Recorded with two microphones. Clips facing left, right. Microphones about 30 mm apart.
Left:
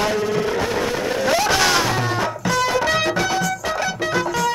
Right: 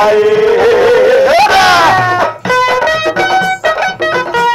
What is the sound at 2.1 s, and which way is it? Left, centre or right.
Music, right.